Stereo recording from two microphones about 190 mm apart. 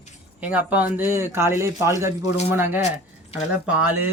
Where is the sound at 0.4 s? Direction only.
10° right (ahead or behind).